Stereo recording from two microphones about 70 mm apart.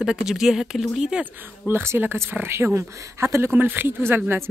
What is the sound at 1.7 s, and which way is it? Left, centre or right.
Speech, right.